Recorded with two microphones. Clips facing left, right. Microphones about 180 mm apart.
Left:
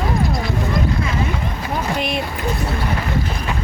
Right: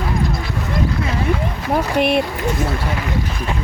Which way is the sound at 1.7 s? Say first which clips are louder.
Right 7 dB; 65° right (ahead or behind).